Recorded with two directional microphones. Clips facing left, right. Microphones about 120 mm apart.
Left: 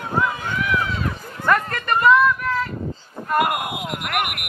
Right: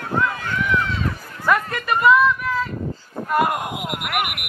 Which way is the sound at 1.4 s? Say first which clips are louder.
Even; 5° right (ahead or behind).